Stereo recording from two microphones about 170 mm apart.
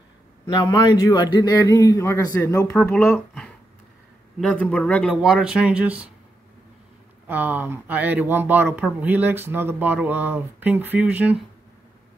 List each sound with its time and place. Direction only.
0.5 s a man's voice: 25° left (ahead or behind)
2.9 s a man's voice: 5° left (ahead or behind)
5.1 s speech: 5° right (ahead or behind)
7.2 s speech: 10° right (ahead or behind)